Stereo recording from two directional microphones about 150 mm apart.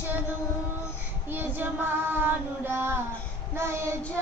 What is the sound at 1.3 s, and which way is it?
Child singing, 15° right (ahead or behind).